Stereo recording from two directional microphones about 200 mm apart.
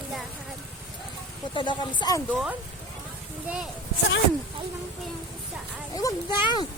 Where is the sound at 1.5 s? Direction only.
25° left (ahead or behind).